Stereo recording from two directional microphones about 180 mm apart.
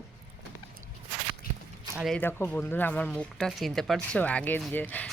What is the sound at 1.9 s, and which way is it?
Speech, centre (ahead or behind).